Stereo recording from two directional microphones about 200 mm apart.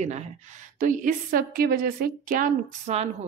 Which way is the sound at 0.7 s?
40° right (ahead or behind).